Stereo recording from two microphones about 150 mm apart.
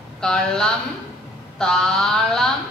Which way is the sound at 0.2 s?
5° left (ahead or behind).